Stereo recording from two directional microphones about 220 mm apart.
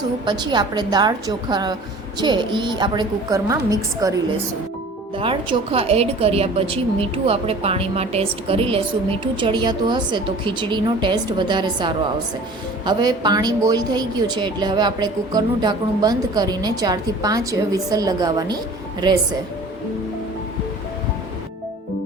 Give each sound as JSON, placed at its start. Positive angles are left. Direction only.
{"t": 0.3, "sound": "a woman's voice", "side_deg": -20}